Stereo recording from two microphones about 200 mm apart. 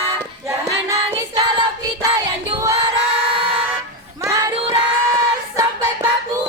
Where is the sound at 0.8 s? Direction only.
20° right (ahead or behind).